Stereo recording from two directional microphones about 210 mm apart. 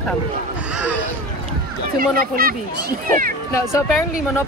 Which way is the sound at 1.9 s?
45° right (ahead or behind).